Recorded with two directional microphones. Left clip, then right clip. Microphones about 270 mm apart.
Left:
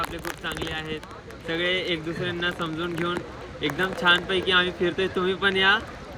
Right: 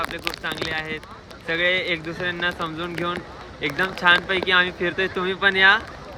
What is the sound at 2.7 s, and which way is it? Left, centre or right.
Speech, right.